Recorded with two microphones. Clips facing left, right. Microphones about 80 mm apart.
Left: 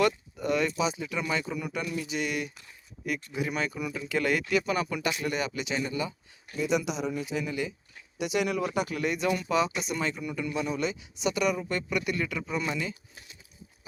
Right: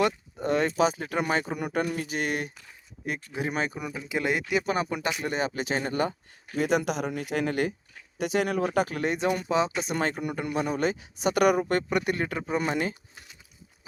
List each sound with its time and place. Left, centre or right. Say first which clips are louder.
0.0 s a sound: even; right
0.8 s speech: right 5 dB; right
4.1 s speech: even; right
4.6 s speech: right 1 dB; right
5.8 s speech: right 4 dB; right
8.2 s speech: right 2 dB; right
9.9 s speech: right 3 dB; right
11.7 s speech: right 4 dB; right